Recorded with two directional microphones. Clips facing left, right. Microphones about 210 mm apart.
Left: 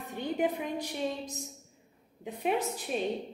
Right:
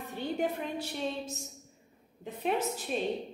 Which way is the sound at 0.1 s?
15° left (ahead or behind).